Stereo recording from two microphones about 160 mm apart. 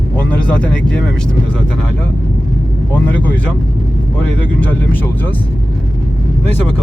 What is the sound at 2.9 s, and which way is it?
Speech, 10° left (ahead or behind).